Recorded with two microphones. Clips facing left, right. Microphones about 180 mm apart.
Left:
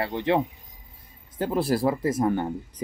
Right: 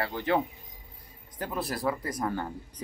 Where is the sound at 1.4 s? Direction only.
30° left (ahead or behind).